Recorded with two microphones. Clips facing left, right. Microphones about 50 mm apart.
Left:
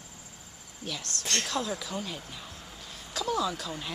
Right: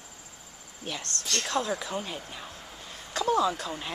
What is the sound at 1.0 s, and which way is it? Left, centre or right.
Speech, centre.